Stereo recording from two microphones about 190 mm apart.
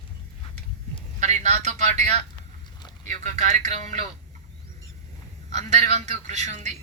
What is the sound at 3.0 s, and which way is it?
Speech, 40° right (ahead or behind).